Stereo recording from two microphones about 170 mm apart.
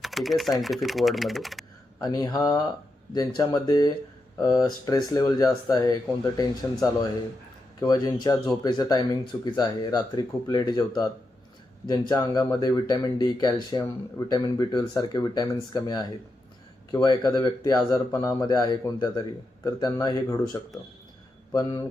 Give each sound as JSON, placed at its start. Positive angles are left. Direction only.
{"t": 0.0, "sound": "speech", "side_deg": 0}
{"t": 2.0, "sound": "speech", "side_deg": 25}
{"t": 7.8, "sound": "speech", "side_deg": 25}